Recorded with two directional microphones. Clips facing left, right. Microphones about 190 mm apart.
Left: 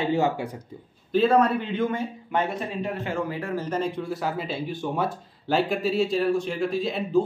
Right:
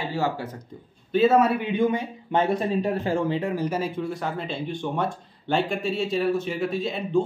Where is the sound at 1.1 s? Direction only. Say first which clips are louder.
Right 1 dB; 5° right (ahead or behind).